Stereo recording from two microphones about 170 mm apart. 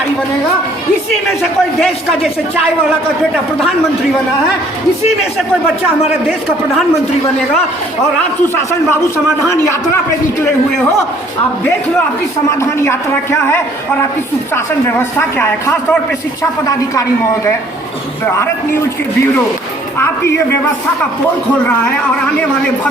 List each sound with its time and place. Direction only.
1.4 s speech: centre (ahead or behind)
9.5 s a man's voice: 15° left (ahead or behind)
12.5 s a man's voice: 15° left (ahead or behind)
20.0 s a man's voice: 15° left (ahead or behind)